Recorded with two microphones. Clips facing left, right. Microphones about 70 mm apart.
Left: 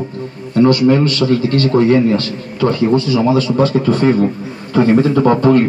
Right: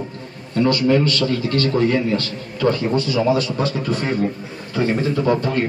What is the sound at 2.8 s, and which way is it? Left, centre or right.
A man's voice, left.